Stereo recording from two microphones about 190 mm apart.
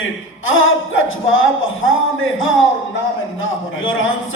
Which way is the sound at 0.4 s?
90° left.